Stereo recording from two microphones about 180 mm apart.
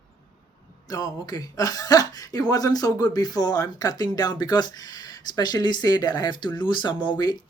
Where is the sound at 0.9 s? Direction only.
20° left (ahead or behind).